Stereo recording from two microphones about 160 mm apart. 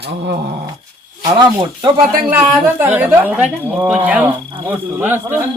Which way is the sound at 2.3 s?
15° right (ahead or behind).